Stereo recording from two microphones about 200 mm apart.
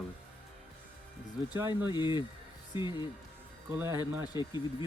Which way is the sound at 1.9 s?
20° left (ahead or behind).